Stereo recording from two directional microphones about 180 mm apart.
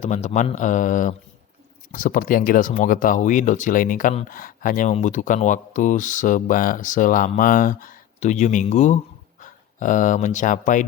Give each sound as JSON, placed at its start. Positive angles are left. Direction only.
{"t": 0.0, "sound": "speech", "side_deg": 40}